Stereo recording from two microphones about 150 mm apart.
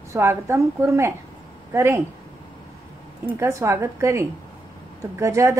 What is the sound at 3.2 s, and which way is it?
A woman's voice, 20° right (ahead or behind).